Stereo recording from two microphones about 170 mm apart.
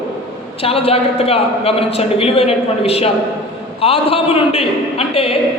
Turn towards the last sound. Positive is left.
turn(degrees=35)  # may be behind; listen again after turning